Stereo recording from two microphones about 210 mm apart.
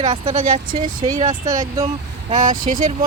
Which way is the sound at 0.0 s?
25° right (ahead or behind).